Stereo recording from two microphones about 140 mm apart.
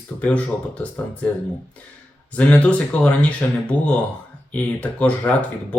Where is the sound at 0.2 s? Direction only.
10° left (ahead or behind).